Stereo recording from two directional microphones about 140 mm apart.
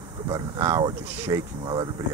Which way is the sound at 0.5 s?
20° right (ahead or behind).